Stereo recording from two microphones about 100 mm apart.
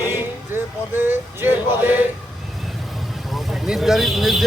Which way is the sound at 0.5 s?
20° right (ahead or behind).